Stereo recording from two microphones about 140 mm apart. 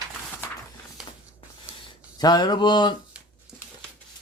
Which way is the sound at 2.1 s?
30° left (ahead or behind).